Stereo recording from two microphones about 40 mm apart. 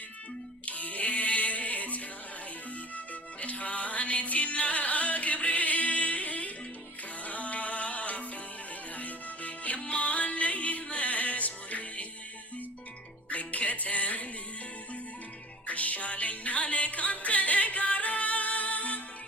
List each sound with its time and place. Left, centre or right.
0.6 s music: left
3.4 s music: left
13.3 s music: left
15.6 s music: left